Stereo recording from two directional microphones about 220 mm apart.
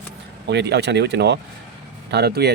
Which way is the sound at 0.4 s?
50° right (ahead or behind).